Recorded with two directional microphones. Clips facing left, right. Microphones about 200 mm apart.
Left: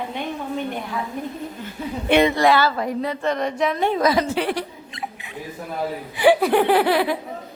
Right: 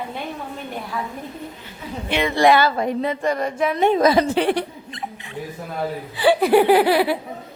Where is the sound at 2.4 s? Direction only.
20° right (ahead or behind).